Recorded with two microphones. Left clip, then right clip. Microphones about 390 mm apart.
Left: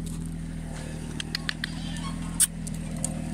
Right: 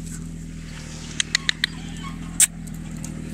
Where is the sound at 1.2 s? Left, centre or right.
Centre.